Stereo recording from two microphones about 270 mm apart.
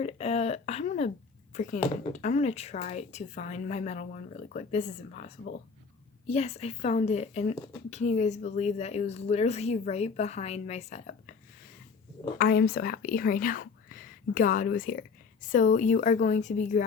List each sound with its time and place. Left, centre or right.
0.0 s a sound: left
1.5 s speech: left
12.4 s speech: left